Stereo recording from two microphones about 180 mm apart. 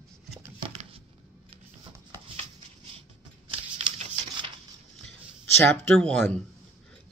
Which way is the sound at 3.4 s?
35° right (ahead or behind).